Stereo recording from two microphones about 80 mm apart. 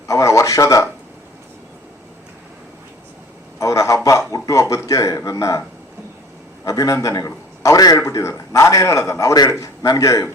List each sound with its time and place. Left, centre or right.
0.1 s a man's voice: left
3.6 s a man's voice: left
6.7 s a man's voice: left